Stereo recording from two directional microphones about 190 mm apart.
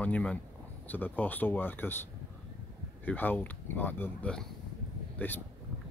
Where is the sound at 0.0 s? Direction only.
5° left (ahead or behind).